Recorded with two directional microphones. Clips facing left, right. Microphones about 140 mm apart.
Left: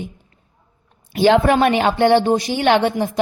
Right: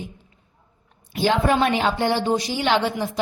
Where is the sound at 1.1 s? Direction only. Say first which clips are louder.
Left 6 dB; 70° left (ahead or behind).